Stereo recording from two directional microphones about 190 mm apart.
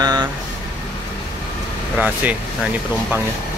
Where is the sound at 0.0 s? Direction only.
20° right (ahead or behind).